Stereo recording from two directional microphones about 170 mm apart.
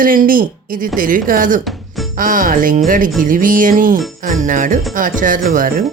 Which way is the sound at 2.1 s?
55° right (ahead or behind).